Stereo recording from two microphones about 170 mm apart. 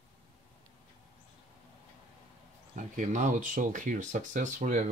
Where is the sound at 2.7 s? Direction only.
45° right (ahead or behind).